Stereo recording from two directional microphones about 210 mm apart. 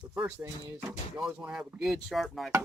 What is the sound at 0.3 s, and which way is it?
Speech, 10° right (ahead or behind).